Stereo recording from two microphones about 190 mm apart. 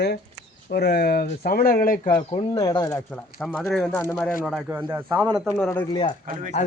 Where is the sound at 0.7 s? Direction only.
55° left (ahead or behind).